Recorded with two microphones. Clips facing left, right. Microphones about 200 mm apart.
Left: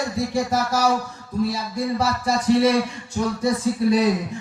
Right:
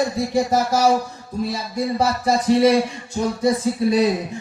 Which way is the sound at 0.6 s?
25° right (ahead or behind).